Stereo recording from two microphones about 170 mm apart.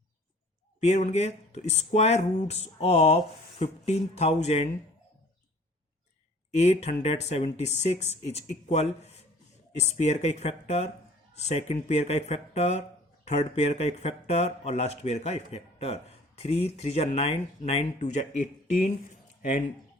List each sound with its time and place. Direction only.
0.8 s speech: 40° left (ahead or behind)
6.5 s speech: 40° left (ahead or behind)